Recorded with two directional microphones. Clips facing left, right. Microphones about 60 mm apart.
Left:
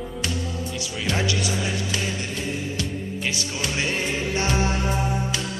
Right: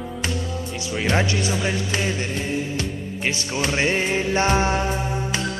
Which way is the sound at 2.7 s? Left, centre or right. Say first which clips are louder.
Right 1 dB; right.